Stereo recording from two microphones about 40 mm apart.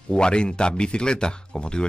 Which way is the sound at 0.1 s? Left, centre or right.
Left.